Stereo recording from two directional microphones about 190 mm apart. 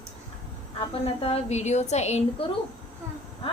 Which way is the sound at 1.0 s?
30° left (ahead or behind).